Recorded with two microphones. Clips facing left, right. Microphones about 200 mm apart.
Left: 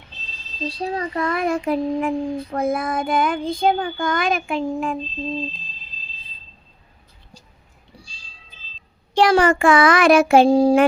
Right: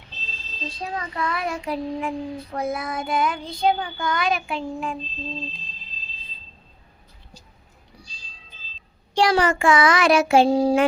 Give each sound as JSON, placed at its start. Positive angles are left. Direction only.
{"t": 0.8, "sound": "child singing", "side_deg": 35}
{"t": 7.9, "sound": "cat", "side_deg": 30}
{"t": 9.1, "sound": "child singing", "side_deg": 55}